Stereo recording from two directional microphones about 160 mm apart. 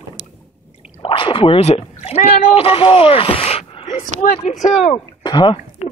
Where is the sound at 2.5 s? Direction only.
35° left (ahead or behind).